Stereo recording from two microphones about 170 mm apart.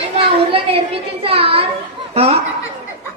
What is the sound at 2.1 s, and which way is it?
Speech, 35° right (ahead or behind).